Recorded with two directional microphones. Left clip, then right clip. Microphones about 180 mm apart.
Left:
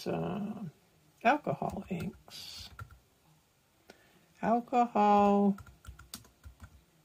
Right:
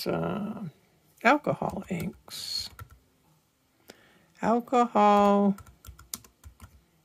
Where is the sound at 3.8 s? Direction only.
35° right (ahead or behind).